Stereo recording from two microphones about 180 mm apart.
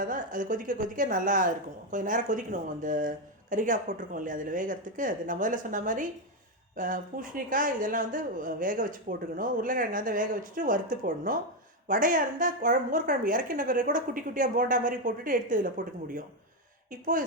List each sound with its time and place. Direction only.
0.0 s speech: 50° right (ahead or behind)